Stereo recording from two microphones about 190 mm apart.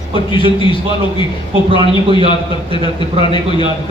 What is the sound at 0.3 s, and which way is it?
A man's voice, 25° left (ahead or behind).